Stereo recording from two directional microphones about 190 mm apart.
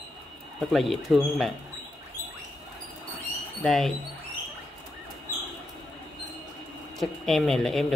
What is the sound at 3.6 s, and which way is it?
Speech, centre (ahead or behind).